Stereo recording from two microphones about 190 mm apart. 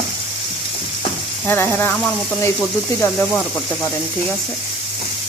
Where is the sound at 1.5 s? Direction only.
10° left (ahead or behind).